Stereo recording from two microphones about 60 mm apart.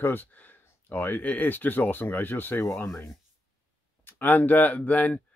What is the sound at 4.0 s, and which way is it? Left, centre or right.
Speech, left.